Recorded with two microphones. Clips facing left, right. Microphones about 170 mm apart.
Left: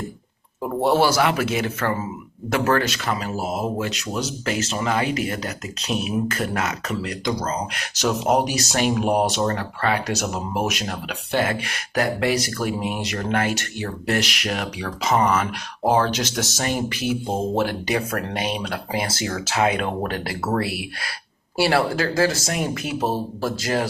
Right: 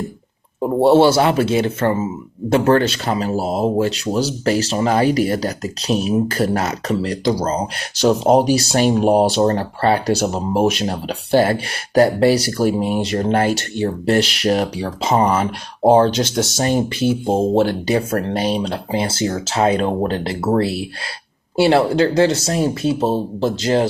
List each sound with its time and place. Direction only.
0.6 s speech: 30° right (ahead or behind)